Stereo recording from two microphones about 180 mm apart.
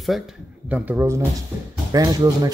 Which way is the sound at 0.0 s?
Centre (ahead or behind).